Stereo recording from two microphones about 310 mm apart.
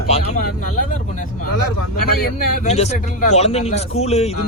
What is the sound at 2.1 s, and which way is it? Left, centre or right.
Speech, left.